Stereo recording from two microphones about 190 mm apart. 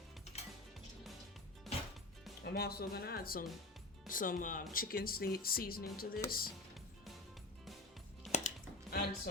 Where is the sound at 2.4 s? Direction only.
55° left (ahead or behind).